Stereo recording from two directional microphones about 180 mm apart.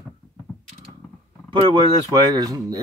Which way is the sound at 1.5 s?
25° right (ahead or behind).